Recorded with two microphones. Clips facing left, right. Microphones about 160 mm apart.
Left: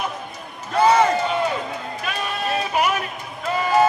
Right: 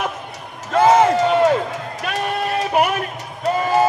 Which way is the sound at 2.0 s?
55° right (ahead or behind).